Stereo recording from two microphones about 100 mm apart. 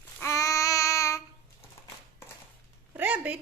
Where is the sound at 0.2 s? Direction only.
30° left (ahead or behind).